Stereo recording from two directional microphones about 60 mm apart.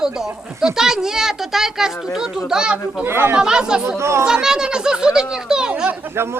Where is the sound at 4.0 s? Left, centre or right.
Right.